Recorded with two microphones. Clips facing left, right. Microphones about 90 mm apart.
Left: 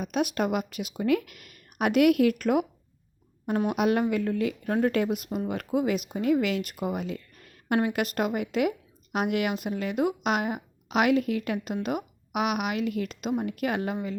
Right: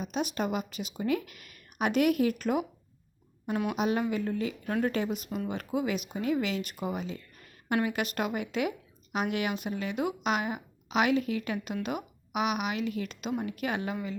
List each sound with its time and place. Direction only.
0.0 s speech: 55° left (ahead or behind)
3.4 s a woman's voice: 40° left (ahead or behind)
3.8 s a woman's voice: 55° left (ahead or behind)
7.7 s a woman's voice: 40° left (ahead or behind)